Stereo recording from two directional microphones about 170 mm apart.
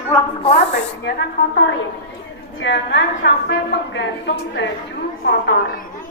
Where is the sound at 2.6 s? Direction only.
90° left.